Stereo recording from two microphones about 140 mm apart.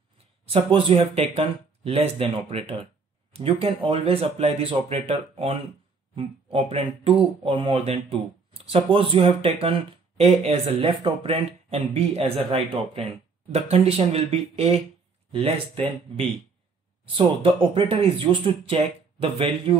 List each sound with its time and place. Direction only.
0.5 s speech: 40° right (ahead or behind)
17.0 s speech: 40° right (ahead or behind)